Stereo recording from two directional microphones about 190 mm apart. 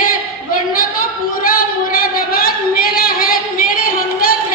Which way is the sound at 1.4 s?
50° left (ahead or behind).